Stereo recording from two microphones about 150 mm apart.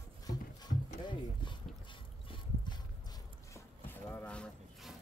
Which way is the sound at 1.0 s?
30° left (ahead or behind).